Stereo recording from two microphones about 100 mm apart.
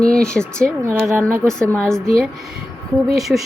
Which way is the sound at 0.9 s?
25° right (ahead or behind).